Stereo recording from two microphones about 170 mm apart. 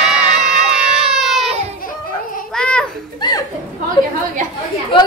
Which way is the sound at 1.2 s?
Centre (ahead or behind).